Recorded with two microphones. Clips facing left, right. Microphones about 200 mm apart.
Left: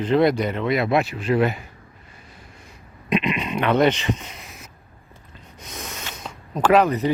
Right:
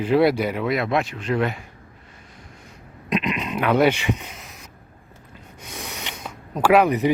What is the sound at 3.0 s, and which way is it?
Speech, centre (ahead or behind).